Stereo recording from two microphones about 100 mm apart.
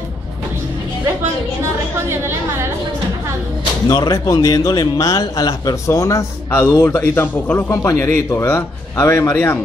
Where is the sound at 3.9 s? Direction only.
45° left (ahead or behind); by 9.6 s 20° left (ahead or behind).